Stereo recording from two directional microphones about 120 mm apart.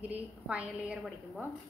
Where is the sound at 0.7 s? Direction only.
Centre (ahead or behind).